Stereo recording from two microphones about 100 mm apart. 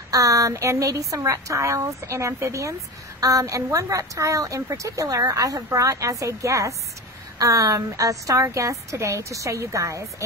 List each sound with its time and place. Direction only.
0.1 s a woman's voice: 35° right (ahead or behind)